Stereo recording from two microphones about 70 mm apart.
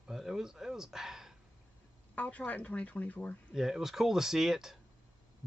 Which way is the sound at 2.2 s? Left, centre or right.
Left.